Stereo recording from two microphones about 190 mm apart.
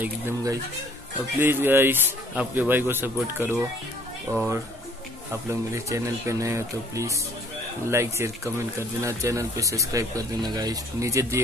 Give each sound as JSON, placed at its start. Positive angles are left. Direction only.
{"t": 0.0, "sound": "speech", "side_deg": -20}